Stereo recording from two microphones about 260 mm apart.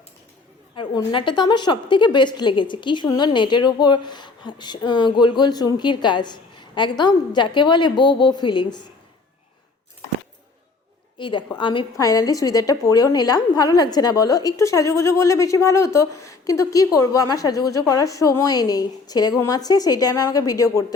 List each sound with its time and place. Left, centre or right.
0.8 s a woman's voice: centre
11.2 s a woman's voice: centre